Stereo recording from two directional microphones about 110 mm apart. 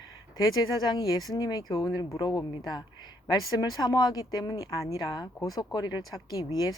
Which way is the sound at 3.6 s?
40° left (ahead or behind).